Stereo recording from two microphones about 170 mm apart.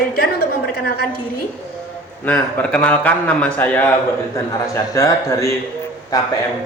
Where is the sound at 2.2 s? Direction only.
10° left (ahead or behind).